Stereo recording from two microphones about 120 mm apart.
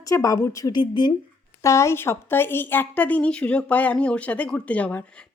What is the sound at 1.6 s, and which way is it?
Speech, 25° left (ahead or behind).